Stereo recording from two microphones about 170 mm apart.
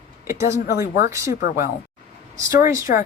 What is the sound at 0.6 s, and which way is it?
Speech, 65° left (ahead or behind).